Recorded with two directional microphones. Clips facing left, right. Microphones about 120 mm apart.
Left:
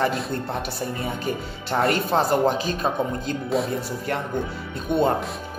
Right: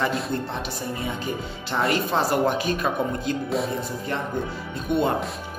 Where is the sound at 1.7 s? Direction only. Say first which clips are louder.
Left 3 dB; 50° left (ahead or behind).